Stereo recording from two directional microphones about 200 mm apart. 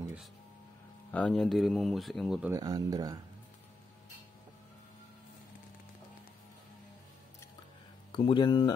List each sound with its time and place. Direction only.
1.1 s speech: 5° left (ahead or behind)
2.5 s speech: 20° right (ahead or behind)
8.1 s speech: 25° left (ahead or behind)